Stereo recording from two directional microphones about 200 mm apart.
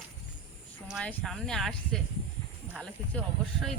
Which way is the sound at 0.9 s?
5° left (ahead or behind).